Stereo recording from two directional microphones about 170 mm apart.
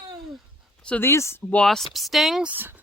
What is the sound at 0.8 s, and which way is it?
Speech, 10° left (ahead or behind).